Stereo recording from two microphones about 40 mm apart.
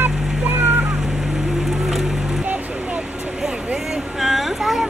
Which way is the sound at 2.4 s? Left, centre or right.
Right.